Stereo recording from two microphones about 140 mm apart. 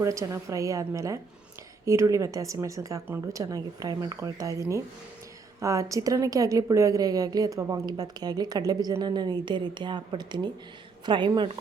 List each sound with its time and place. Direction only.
0.0 s a woman's voice: 20° right (ahead or behind)